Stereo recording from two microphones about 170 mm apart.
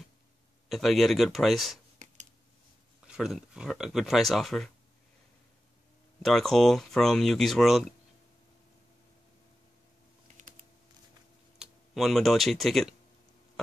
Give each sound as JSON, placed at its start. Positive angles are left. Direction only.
{"t": 0.7, "sound": "speech", "side_deg": 0}
{"t": 3.2, "sound": "speech", "side_deg": -5}
{"t": 6.2, "sound": "speech", "side_deg": 0}
{"t": 11.5, "sound": "speech", "side_deg": 0}